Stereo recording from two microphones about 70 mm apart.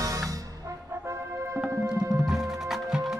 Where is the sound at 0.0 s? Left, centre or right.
Right.